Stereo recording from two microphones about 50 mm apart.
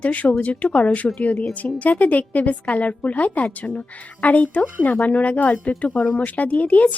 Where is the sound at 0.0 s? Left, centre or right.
Left.